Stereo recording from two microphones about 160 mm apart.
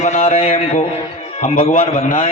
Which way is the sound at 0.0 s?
45° left (ahead or behind).